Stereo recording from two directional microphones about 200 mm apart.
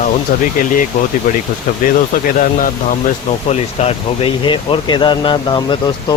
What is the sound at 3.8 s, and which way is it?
Speech, 30° left (ahead or behind).